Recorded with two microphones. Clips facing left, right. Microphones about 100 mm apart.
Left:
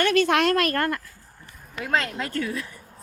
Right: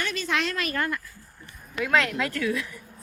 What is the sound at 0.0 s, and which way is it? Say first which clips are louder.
A woman's voice: left 8 dB; 65° left (ahead or behind).